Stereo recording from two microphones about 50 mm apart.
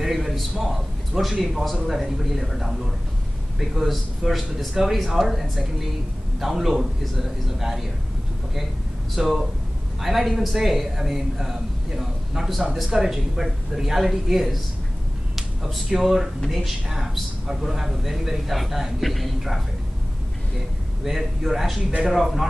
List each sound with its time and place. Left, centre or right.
0.0 s a sound: centre
1.4 s a man's voice: centre
9.1 s a man's voice: centre
21.0 s a man's voice: centre